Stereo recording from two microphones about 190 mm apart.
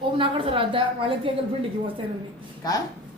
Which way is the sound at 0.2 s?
25° right (ahead or behind).